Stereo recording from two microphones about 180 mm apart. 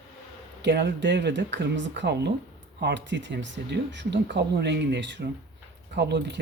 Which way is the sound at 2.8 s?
80° right.